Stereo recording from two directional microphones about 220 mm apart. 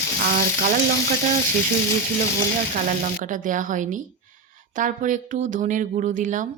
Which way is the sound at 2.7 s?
35° right (ahead or behind).